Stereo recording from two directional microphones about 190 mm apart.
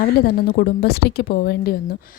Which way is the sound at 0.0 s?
50° left (ahead or behind).